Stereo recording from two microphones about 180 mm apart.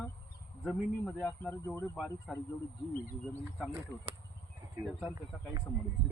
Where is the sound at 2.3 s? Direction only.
Centre (ahead or behind).